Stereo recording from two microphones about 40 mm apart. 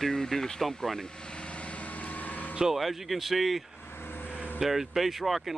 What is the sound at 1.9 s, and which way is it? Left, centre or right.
Vehicle, left.